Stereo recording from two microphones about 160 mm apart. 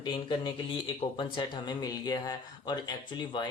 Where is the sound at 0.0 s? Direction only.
25° left (ahead or behind).